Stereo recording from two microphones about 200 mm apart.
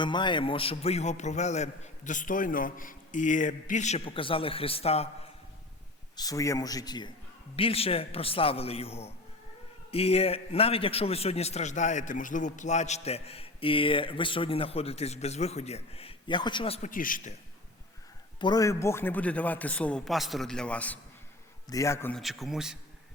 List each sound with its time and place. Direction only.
0.0 s a man's voice: 25° left (ahead or behind)
6.1 s a man's voice: 15° left (ahead or behind); by 17.3 s 45° left (ahead or behind)
18.3 s a man's voice: 20° left (ahead or behind)
22.2 s a man's voice: centre (ahead or behind)